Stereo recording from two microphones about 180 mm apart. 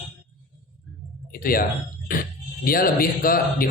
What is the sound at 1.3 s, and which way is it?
A man's voice, 55° left (ahead or behind).